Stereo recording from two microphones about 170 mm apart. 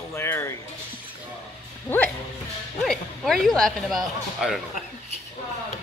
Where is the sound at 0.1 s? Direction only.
15° left (ahead or behind).